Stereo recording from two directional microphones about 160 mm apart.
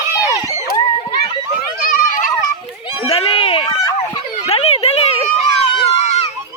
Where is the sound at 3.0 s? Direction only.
35° left (ahead or behind).